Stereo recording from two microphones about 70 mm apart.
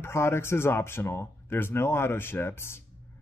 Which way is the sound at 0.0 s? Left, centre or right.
Left.